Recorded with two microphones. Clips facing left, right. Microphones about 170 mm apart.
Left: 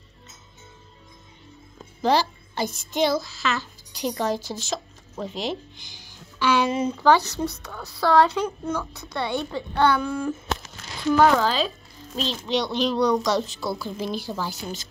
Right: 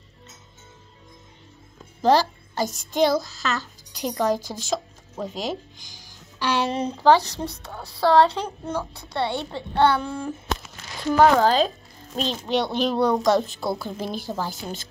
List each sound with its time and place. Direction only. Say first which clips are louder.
2.0 s a child's voice: right 3 dB; 45° right (ahead or behind); by 10.3 s 25° right (ahead or behind)
11.4 s a child's voice: right 5 dB; 45° right (ahead or behind)